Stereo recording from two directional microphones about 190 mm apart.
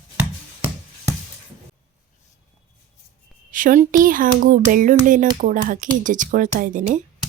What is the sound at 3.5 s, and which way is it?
A child's voice, 45° right (ahead or behind).